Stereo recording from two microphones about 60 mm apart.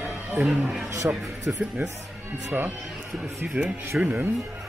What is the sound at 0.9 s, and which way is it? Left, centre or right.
Speech, right.